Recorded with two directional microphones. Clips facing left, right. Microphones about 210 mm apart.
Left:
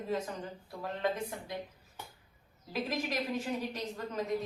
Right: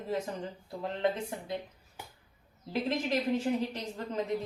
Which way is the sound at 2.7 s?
30° right (ahead or behind).